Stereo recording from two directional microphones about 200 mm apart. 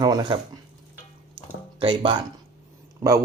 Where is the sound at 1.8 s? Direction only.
25° right (ahead or behind).